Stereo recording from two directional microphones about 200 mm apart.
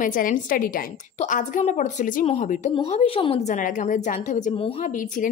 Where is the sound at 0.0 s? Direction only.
40° left (ahead or behind).